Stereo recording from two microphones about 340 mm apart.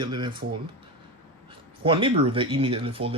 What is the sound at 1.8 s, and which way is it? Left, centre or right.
Speech, centre.